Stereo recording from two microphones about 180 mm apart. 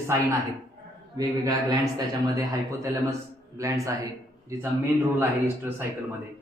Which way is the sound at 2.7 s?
15° right (ahead or behind).